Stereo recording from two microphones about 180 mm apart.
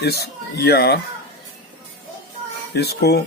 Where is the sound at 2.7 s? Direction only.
65° left (ahead or behind).